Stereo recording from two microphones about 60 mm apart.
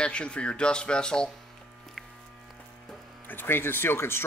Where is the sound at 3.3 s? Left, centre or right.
Left.